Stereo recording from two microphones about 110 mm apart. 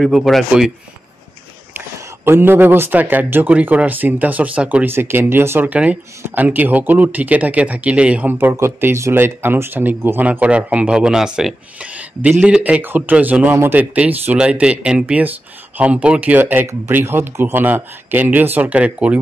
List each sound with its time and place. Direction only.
0.0 s speech: centre (ahead or behind)
2.2 s speech: 20° right (ahead or behind)